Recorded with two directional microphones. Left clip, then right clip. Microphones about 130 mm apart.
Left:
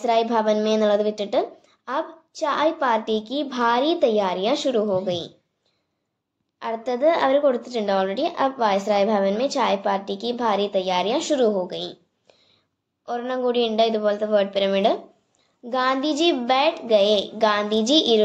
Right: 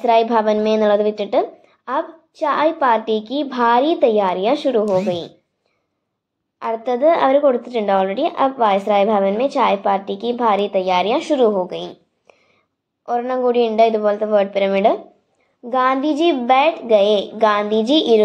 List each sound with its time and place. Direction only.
0.0 s a woman's voice: 25° right (ahead or behind)
6.8 s a woman's voice: 25° right (ahead or behind)
11.7 s a woman's voice: 90° right
13.0 s a woman's voice: 25° right (ahead or behind)